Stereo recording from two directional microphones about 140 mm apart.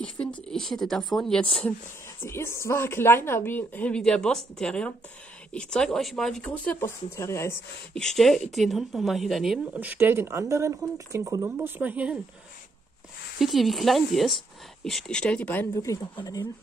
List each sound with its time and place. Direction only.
0.0 s speech: 10° left (ahead or behind)
2.2 s speech: 20° left (ahead or behind)
7.9 s speech: 5° left (ahead or behind)
9.8 s speech: 15° right (ahead or behind)
13.4 s speech: centre (ahead or behind)
15.7 s speech: 25° left (ahead or behind)